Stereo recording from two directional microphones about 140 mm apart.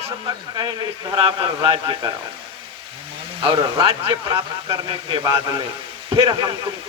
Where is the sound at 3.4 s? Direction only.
30° right (ahead or behind).